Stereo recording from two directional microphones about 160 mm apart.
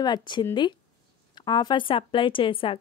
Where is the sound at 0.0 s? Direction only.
30° left (ahead or behind).